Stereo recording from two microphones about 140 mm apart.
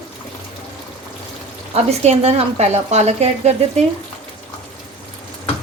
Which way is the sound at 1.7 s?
50° right (ahead or behind).